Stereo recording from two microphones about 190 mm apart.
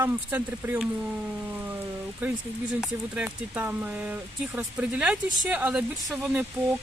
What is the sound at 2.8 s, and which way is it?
Speech, 5° right (ahead or behind).